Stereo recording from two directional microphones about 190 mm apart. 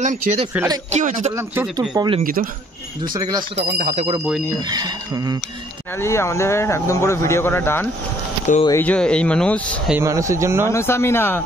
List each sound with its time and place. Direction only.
0.0 s speech: 40° right (ahead or behind)
1.3 s speech: 15° right (ahead or behind)
3.7 s speech: 40° right (ahead or behind)
4.6 s speech: 20° right (ahead or behind)
5.9 s speech: 15° left (ahead or behind)
9.8 s speech: 15° right (ahead or behind)
10.7 s speech: 15° left (ahead or behind)